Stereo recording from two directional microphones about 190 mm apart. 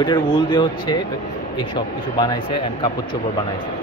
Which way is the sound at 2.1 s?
25° left (ahead or behind).